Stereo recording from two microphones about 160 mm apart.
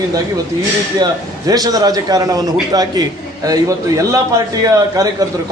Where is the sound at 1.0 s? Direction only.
25° right (ahead or behind).